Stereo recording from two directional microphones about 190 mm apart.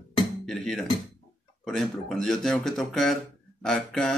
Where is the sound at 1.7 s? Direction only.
5° left (ahead or behind).